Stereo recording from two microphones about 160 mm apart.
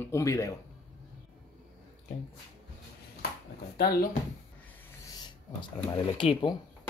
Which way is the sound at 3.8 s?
65° left (ahead or behind).